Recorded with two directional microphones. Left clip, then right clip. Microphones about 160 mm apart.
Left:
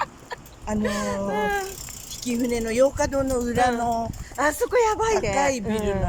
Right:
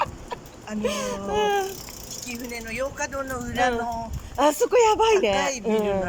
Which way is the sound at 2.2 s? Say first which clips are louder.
Left 9 dB; 40° left (ahead or behind).